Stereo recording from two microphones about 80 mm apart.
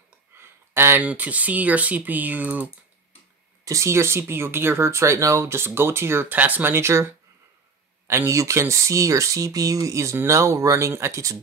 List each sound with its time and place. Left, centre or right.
0.4 s a sound: right
1.0 s speech: centre
3.6 s speech: right